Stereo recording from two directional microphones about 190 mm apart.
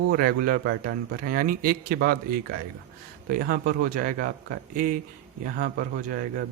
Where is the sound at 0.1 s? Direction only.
50° right (ahead or behind).